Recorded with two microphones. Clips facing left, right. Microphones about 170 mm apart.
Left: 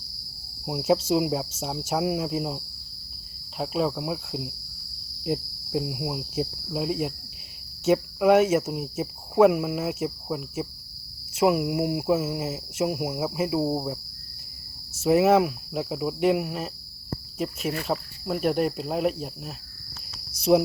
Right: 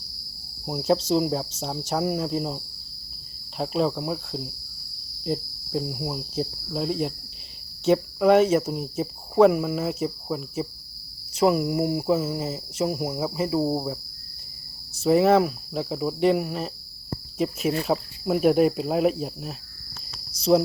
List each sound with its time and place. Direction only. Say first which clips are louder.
0.6 s speech: even; 5° left (ahead or behind)
3.6 s cricket: right 2 dB; 5° left (ahead or behind)
5.2 s speech: even; 10° left (ahead or behind)
7.9 s cricket: right 1 dB; 5° left (ahead or behind)
11.3 s speech: right 1 dB; 10° left (ahead or behind)
15.0 s cricket: right 1 dB; 5° left (ahead or behind)
20.5 s speech: even; 10° left (ahead or behind)